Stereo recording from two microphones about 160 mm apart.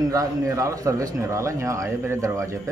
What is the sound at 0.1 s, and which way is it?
A man's voice, 20° right (ahead or behind).